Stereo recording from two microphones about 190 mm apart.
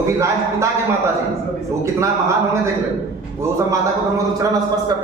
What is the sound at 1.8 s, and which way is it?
Speech, 15° right (ahead or behind).